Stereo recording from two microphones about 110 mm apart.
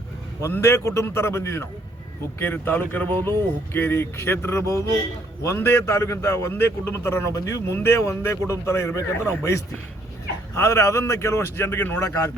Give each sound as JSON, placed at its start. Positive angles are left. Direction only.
{"t": 0.4, "sound": "a man's voice", "side_deg": 25}